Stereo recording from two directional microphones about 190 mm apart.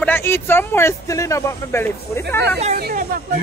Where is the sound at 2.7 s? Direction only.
50° right (ahead or behind).